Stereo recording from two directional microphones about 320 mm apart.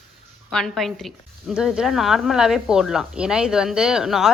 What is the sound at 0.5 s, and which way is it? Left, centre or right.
A woman's voice, centre.